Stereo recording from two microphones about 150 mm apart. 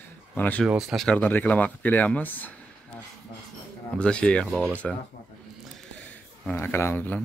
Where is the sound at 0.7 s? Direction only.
5° right (ahead or behind).